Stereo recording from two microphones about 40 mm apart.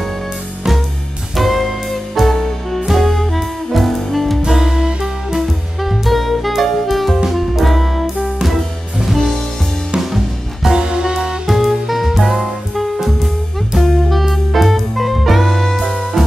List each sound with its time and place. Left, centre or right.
1.3 s music: centre
4.5 s music: centre
5.8 s music: centre
9.9 s music: centre
10.7 s music: centre
11.4 s music: centre